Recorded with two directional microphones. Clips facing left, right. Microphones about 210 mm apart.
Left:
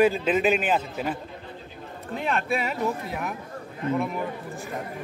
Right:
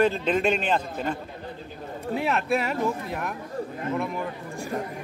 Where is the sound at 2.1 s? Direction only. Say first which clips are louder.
Right 2 dB; 5° right (ahead or behind).